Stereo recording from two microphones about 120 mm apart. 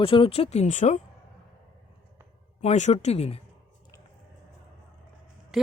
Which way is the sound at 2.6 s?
70° left (ahead or behind).